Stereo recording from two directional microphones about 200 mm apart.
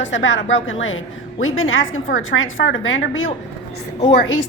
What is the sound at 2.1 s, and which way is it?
Speech, 75° left (ahead or behind).